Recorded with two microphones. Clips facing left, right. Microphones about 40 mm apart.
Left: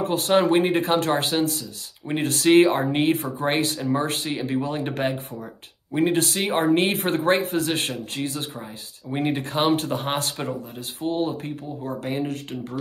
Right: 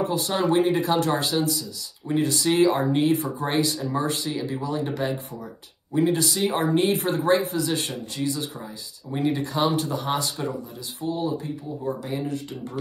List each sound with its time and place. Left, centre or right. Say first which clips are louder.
0.0 s speech: left 4 dB; left